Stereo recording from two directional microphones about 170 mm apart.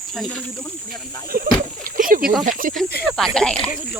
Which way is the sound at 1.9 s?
55° right (ahead or behind).